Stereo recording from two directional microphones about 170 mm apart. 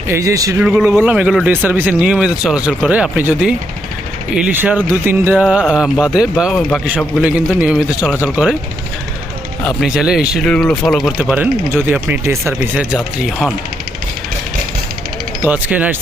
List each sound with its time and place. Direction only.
0.1 s a man's voice: 20° right (ahead or behind)
0.6 s speech: 5° right (ahead or behind)
7.2 s speech: 5° right (ahead or behind)
9.6 s speech: 5° right (ahead or behind)
15.4 s speech: 10° right (ahead or behind)